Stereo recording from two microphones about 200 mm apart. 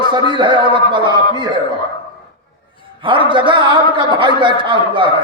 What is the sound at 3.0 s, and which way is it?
A man's voice, 25° right (ahead or behind).